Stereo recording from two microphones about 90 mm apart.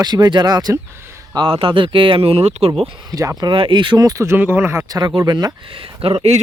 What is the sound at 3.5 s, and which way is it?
Speech, 70° right (ahead or behind).